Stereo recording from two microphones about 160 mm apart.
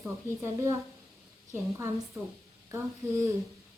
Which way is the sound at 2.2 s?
20° right (ahead or behind).